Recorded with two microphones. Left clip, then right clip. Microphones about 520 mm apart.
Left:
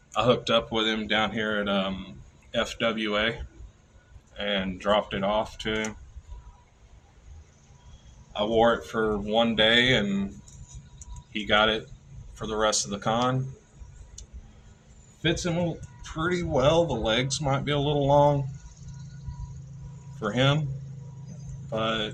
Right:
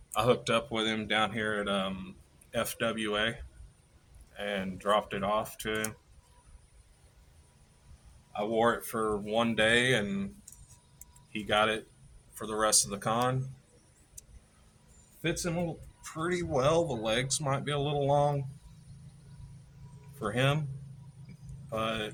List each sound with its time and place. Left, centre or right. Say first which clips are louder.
0.1 s speech: left 5 dB; right
4.4 s speech: left 6 dB; right
8.3 s speech: left 6 dB; right
11.3 s speech: left 5 dB; right
16.1 s speech: left 5 dB; right
20.2 s speech: left 5 dB; right
21.7 s speech: left 5 dB; right